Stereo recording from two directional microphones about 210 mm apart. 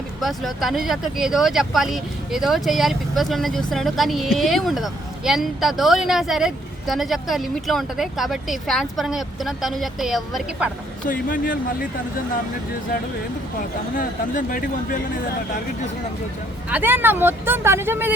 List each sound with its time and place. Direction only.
0.2 s speech: centre (ahead or behind)
11.1 s speech: 40° left (ahead or behind)
14.0 s speech: 40° left (ahead or behind)
16.6 s speech: 10° right (ahead or behind)